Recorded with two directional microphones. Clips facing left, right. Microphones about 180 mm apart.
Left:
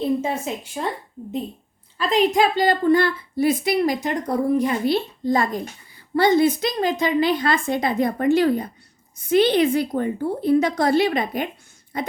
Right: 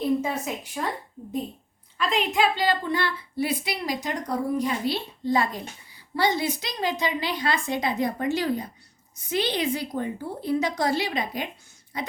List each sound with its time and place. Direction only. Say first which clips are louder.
0.0 s speech: left 2 dB; 25° left (ahead or behind)
2.0 s a woman's voice: left 6 dB; 35° left (ahead or behind); by 12.1 s 55° left (ahead or behind)